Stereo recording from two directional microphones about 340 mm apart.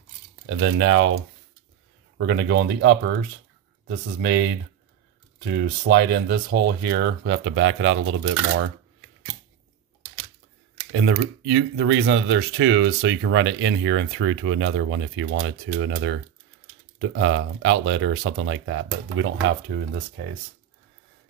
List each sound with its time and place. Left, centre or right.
0.5 s speech: right
5.4 s speech: right
10.9 s speech: right